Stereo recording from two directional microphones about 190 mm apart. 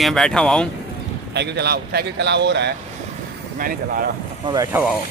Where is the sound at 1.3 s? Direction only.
60° right (ahead or behind).